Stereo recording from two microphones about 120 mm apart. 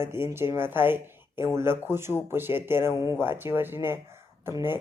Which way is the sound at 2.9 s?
30° left (ahead or behind).